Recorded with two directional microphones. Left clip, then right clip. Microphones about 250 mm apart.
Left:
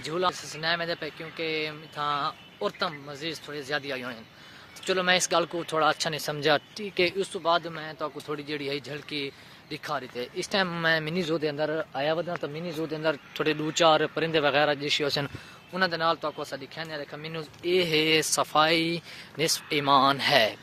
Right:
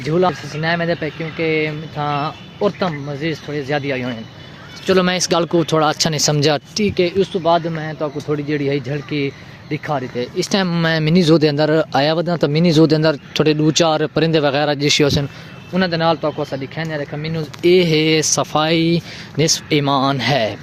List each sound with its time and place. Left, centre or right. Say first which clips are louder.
0.0 s speech: right 11 dB; centre
4.9 s speech: right 6 dB; centre
7.2 s speech: right 10 dB; centre
10.5 s speech: right 5 dB; centre; by 13.0 s right
13.0 s speech: right 11 dB; centre
15.7 s speech: right 9 dB; centre
17.6 s speech: right 11 dB; centre